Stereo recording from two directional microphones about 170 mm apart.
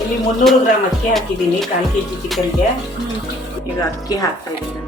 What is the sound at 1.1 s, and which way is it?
Speech, centre (ahead or behind).